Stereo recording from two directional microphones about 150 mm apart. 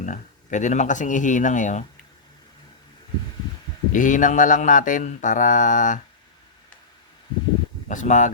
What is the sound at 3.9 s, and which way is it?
Speech, 60° left (ahead or behind).